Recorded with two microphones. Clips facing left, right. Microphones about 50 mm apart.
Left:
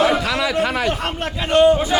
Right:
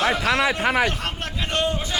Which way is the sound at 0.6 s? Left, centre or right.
Right.